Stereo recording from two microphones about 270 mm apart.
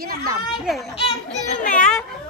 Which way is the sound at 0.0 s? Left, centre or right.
Right.